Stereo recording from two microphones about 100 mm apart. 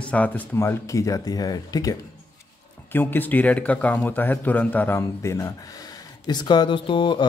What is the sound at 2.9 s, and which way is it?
Speech, 20° left (ahead or behind).